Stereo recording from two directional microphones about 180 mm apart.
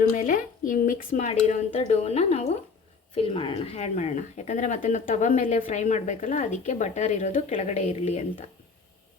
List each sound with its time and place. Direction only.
0.1 s speech: 45° left (ahead or behind)